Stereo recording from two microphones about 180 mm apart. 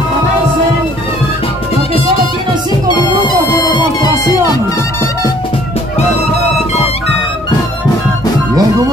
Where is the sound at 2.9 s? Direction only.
25° left (ahead or behind).